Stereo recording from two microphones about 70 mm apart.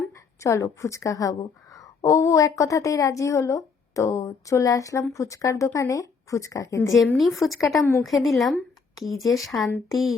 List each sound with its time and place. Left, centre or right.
0.4 s a woman's voice: left
7.2 s a woman's voice: centre